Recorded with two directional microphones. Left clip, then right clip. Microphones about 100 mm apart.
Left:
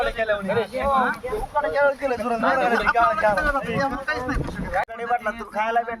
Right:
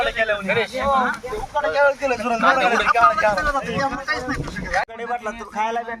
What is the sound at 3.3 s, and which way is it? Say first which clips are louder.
Speech: right 1 dB; 35° right (ahead or behind).